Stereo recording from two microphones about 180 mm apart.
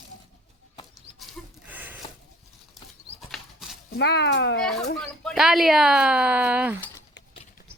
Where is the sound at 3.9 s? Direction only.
70° left (ahead or behind).